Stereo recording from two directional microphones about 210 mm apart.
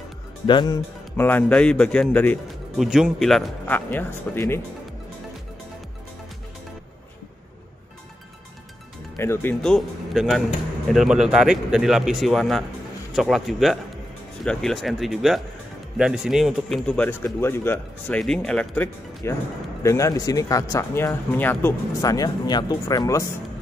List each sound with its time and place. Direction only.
0.5 s speech: 20° left (ahead or behind)
1.1 s speech: 10° left (ahead or behind)
9.1 s speech: 10° left (ahead or behind)